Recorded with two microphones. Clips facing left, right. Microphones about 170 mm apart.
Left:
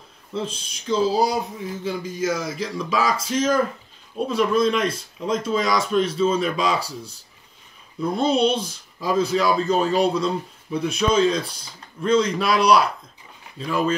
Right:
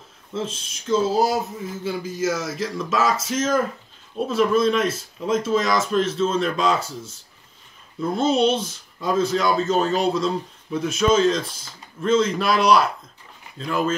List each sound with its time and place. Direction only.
0.3 s speech: centre (ahead or behind)